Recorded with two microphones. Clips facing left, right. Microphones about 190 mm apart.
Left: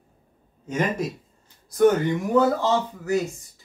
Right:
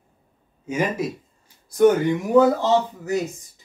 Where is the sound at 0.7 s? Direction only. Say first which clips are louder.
Right 1 dB; 5° right (ahead or behind).